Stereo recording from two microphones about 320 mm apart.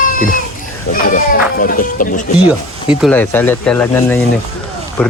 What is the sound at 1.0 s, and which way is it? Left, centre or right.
Speech, left.